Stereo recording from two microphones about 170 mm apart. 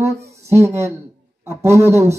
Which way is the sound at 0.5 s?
15° right (ahead or behind).